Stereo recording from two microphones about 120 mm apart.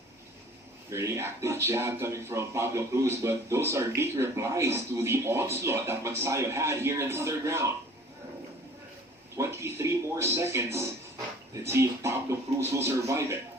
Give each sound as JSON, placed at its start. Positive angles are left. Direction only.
{"t": 0.9, "sound": "speech", "side_deg": -25}
{"t": 9.4, "sound": "speech", "side_deg": -20}